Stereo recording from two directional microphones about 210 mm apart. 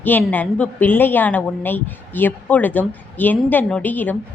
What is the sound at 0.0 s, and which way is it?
Speech, 10° left (ahead or behind).